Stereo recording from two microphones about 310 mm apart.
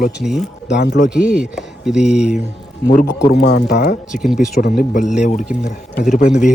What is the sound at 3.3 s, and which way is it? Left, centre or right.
Speech, left.